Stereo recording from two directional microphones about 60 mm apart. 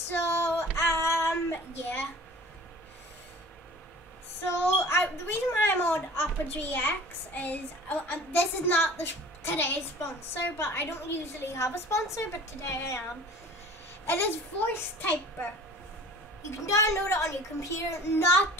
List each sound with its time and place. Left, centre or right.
0.1 s child singing: left
4.7 s a woman's voice: left
14.0 s a woman's voice: left
16.4 s a woman's voice: left